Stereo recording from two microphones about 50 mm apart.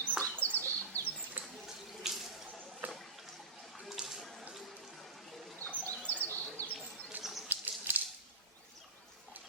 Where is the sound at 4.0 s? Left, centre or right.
Centre.